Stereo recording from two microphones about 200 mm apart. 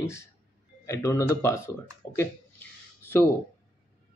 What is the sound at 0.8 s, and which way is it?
Speech, 15° left (ahead or behind).